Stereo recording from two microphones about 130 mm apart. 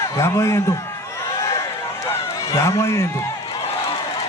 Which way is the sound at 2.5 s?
25° left (ahead or behind).